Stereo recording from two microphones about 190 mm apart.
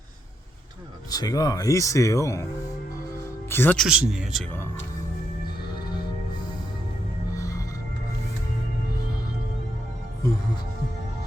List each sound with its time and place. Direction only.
1.1 s speech: 20° left (ahead or behind)
3.5 s speech: 10° left (ahead or behind)
3.8 s speech: 5° right (ahead or behind)
7.3 s music: 15° left (ahead or behind)
10.2 s speech: 15° left (ahead or behind)